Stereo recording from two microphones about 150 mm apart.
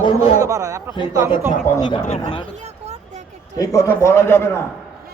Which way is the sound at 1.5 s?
20° left (ahead or behind).